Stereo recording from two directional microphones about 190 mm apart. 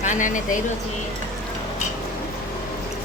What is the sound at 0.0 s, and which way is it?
Speech, 40° left (ahead or behind).